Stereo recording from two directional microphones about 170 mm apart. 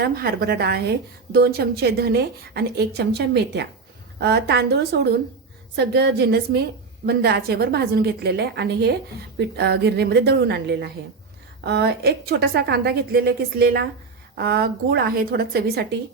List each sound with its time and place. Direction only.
0.0 s a woman's voice: 65° right (ahead or behind)